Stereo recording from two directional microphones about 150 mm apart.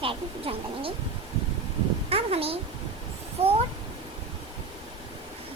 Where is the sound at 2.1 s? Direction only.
40° right (ahead or behind).